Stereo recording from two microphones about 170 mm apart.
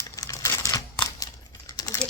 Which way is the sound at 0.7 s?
20° left (ahead or behind).